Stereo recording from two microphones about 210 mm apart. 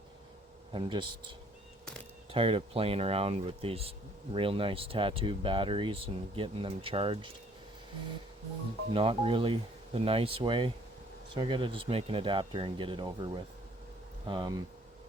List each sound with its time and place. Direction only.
0.7 s speech: 20° right (ahead or behind)
8.9 s speech: 25° right (ahead or behind)